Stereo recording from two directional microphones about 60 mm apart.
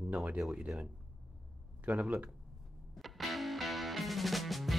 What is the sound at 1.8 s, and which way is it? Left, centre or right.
Speech, right.